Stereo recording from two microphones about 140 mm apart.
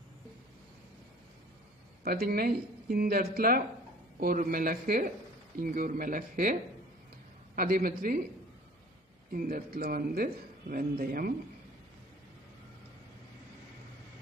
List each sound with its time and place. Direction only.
2.0 s a man's voice: 90° right
7.5 s a man's voice: 90° right
9.3 s a man's voice: 90° right